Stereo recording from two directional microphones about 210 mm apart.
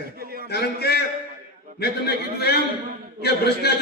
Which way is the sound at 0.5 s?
50° left (ahead or behind).